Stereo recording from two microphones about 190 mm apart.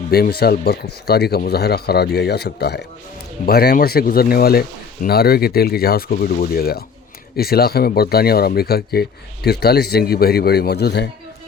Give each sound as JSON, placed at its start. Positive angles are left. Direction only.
{"t": 0.1, "sound": "speech", "side_deg": 55}